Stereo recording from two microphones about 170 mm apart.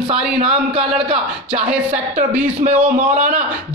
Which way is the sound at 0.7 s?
30° right (ahead or behind).